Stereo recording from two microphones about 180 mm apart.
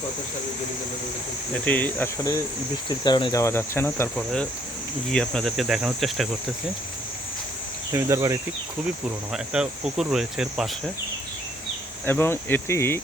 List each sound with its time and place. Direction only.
1.6 s cricket: 10° left (ahead or behind)
3.0 s speech: 25° left (ahead or behind)
3.4 s cricket: 15° left (ahead or behind)
5.1 s speech: 5° left (ahead or behind)
7.9 s speech: 15° right (ahead or behind)
9.3 s speech: 5° right (ahead or behind)
12.0 s cricket: 15° left (ahead or behind)